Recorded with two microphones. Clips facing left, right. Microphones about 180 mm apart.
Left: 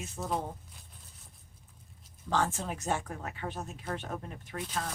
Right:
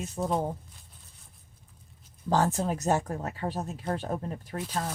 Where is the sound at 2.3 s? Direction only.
40° right (ahead or behind).